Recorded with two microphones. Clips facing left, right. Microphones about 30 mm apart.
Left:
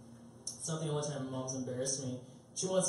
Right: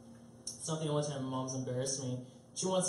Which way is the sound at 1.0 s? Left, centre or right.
Centre.